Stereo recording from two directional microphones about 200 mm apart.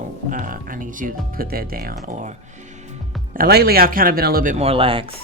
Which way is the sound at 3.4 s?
50° right (ahead or behind).